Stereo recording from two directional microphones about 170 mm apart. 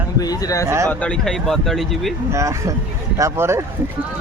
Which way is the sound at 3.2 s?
15° right (ahead or behind).